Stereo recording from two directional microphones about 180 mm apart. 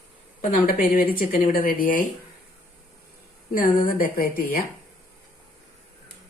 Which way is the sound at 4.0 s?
55° left (ahead or behind).